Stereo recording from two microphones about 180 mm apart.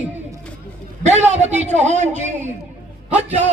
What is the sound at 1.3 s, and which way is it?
Speech, 40° right (ahead or behind).